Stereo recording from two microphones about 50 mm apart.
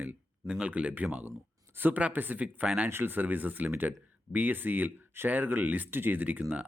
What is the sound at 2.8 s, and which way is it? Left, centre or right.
Speech, right.